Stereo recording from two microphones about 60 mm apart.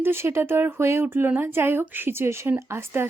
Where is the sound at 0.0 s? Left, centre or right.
Right.